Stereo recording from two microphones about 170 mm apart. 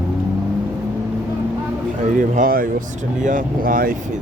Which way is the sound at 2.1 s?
50° right (ahead or behind).